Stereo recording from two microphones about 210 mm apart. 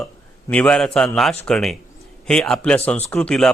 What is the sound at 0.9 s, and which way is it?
A man's voice, centre (ahead or behind).